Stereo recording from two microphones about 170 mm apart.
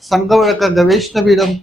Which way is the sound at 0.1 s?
Centre (ahead or behind).